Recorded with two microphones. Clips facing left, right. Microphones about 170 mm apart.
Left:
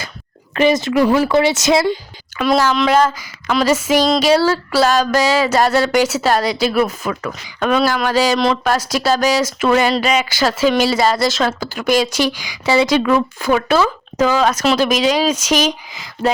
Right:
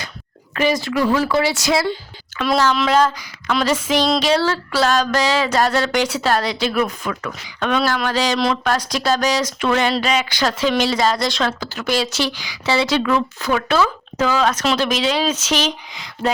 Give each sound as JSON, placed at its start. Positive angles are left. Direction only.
{"t": 0.5, "sound": "speech", "side_deg": 25}
{"t": 2.4, "sound": "speech", "side_deg": 10}